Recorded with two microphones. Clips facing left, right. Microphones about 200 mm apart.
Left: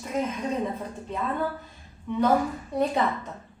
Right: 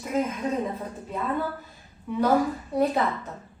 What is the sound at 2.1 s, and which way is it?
Speech, 5° right (ahead or behind).